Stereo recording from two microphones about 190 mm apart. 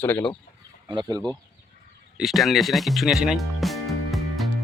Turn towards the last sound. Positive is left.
turn(degrees=0)  # may be behind; listen again after turning